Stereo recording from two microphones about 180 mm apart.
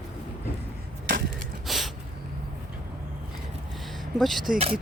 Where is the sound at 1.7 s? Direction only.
Centre (ahead or behind).